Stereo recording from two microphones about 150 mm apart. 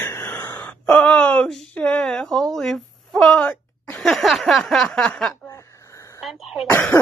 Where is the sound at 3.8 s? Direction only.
5° left (ahead or behind).